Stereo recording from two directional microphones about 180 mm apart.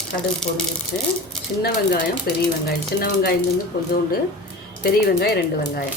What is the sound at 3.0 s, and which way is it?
Speech, 60° left (ahead or behind).